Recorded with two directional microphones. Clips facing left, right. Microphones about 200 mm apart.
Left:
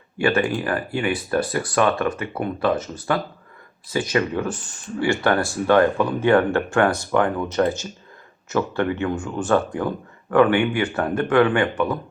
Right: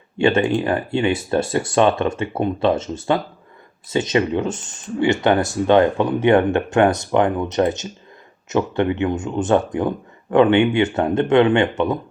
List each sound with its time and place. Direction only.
0.2 s speech: 25° right (ahead or behind)